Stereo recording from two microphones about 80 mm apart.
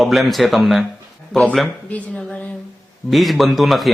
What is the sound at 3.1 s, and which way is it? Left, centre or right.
Speech, centre.